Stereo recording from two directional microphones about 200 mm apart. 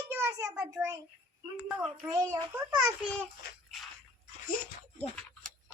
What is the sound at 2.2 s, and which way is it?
Speech, 10° right (ahead or behind).